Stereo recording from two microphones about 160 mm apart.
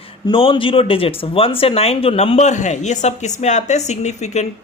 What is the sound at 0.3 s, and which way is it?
Speech, 35° left (ahead or behind).